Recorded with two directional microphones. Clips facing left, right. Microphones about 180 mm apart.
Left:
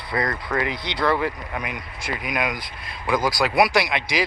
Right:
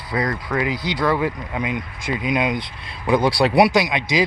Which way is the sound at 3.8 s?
20° right (ahead or behind).